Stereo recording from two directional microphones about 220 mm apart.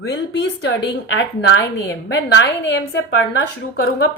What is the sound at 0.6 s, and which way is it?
A woman's voice, 55° left (ahead or behind).